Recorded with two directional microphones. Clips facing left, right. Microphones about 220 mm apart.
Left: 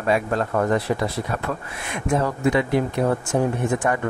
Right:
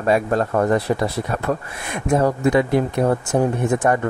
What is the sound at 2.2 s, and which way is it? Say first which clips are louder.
Speech: right 5 dB; 40° right (ahead or behind).